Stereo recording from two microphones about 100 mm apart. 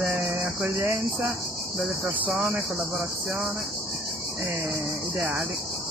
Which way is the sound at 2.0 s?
20° right (ahead or behind).